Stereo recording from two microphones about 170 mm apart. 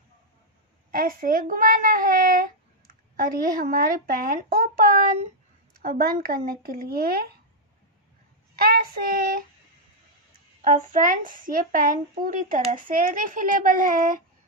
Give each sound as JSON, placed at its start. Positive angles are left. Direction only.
{"t": 0.9, "sound": "a child's voice", "side_deg": -55}
{"t": 8.5, "sound": "a child's voice", "side_deg": -60}
{"t": 10.6, "sound": "a woman's voice", "side_deg": -50}